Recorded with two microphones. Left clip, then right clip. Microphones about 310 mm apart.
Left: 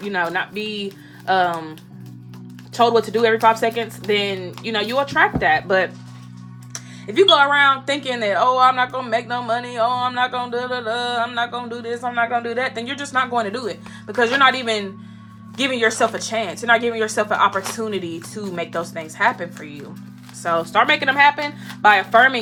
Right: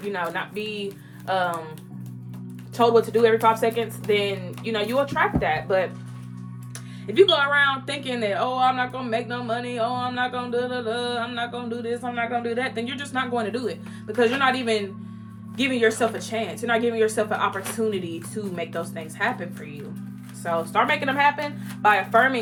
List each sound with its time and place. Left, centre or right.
0.1 s speech: left
2.7 s speech: left
6.7 s speech: centre